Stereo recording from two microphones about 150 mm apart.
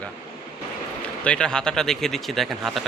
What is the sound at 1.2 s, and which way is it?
Speech, 5° left (ahead or behind).